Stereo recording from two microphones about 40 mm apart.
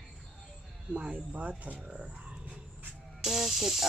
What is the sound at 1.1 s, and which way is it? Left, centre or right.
Speech, right.